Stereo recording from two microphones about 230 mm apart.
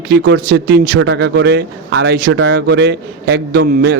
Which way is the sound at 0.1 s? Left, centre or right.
Right.